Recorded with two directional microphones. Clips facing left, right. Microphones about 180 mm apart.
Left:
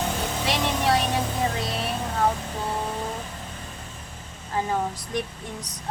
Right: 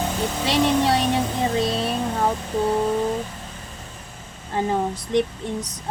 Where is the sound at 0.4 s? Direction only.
25° right (ahead or behind).